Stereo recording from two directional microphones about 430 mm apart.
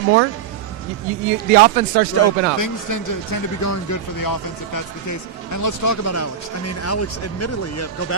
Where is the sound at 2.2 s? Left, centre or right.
Left.